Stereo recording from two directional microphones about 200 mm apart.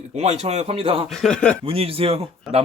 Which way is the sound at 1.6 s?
30° right (ahead or behind).